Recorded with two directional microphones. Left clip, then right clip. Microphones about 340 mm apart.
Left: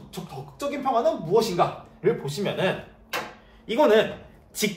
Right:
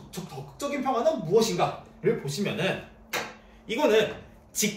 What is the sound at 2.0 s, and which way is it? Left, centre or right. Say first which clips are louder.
Speech: left 3 dB; centre.